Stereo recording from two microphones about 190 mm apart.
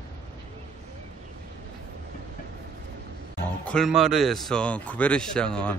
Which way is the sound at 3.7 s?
Centre (ahead or behind).